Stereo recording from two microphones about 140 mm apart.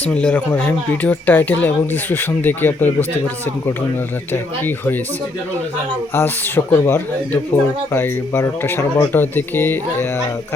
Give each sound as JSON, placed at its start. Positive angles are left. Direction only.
{"t": 0.1, "sound": "speech", "side_deg": 10}
{"t": 6.1, "sound": "speech", "side_deg": 15}